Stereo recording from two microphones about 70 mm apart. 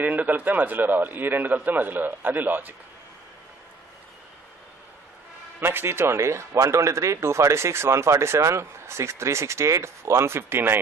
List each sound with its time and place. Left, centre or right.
0.0 s a man's voice: right
5.6 s speech: right